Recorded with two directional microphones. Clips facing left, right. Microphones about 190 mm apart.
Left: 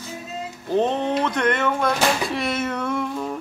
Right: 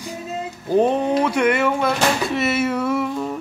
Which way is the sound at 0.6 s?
10° right (ahead or behind).